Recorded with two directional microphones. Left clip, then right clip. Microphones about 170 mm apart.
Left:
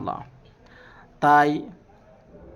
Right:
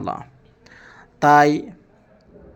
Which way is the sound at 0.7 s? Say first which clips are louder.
Right 4 dB; 15° right (ahead or behind).